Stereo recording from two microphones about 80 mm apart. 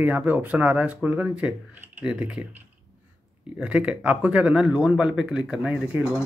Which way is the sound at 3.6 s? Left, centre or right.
Centre.